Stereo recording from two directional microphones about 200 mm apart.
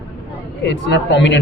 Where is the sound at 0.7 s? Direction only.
60° left (ahead or behind).